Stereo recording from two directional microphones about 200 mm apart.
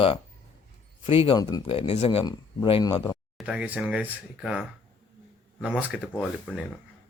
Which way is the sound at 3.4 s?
5° right (ahead or behind).